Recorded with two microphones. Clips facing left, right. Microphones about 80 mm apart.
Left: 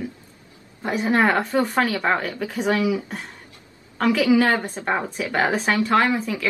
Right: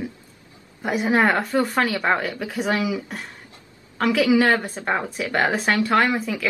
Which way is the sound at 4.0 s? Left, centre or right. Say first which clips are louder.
Even; centre.